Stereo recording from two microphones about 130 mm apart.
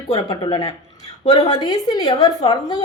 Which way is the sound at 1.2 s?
50° left (ahead or behind).